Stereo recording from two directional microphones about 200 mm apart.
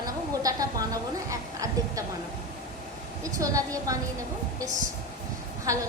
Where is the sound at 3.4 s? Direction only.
15° right (ahead or behind).